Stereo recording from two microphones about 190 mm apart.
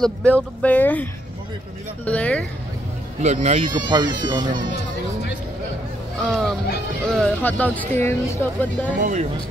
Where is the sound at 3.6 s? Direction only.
25° right (ahead or behind).